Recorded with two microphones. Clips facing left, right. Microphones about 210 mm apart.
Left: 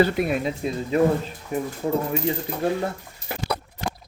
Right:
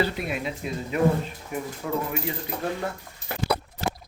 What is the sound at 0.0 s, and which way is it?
Speech, 50° left (ahead or behind).